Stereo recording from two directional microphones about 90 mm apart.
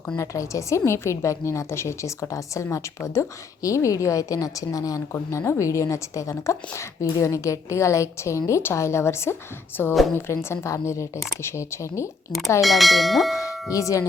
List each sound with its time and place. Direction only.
0.2 s a woman's voice: 35° left (ahead or behind)
12.6 s bell: centre (ahead or behind)
13.4 s tubular bells: 40° left (ahead or behind)